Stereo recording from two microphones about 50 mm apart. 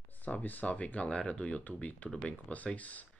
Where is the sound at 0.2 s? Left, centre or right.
Left.